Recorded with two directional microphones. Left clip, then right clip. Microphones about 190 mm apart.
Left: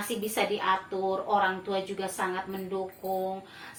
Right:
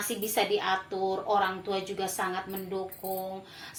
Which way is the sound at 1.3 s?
45° right (ahead or behind).